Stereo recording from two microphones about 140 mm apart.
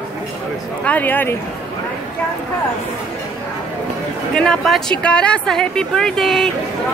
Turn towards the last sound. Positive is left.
turn(degrees=0)  # may be behind; listen again after turning